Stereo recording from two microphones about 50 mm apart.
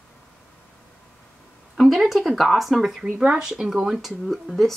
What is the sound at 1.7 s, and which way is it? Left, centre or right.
Speech, centre.